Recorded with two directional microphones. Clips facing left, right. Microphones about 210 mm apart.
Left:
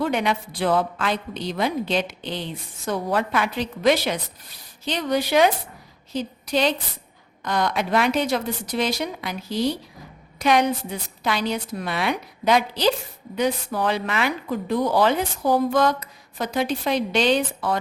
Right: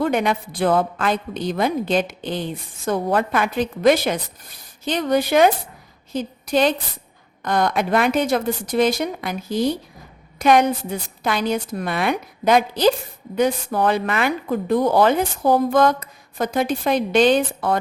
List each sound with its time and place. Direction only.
0.0 s a woman's voice: 50° right (ahead or behind)